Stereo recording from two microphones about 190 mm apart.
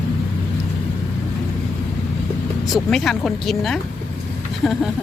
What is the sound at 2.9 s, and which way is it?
Speech, centre (ahead or behind).